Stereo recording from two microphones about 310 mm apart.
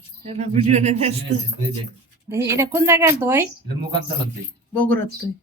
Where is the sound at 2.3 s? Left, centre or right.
Centre.